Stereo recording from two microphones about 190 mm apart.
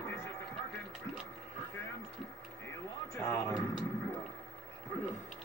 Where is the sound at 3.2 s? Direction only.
15° left (ahead or behind).